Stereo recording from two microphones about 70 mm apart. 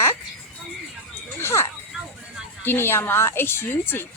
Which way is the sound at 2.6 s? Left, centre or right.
Left.